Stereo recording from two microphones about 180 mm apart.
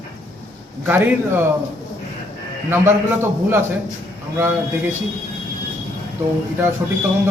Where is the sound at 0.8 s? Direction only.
10° right (ahead or behind).